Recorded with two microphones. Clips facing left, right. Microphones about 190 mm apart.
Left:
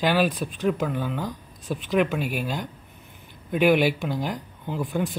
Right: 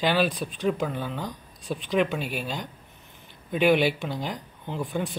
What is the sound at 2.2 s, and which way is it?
Speech, 50° left (ahead or behind).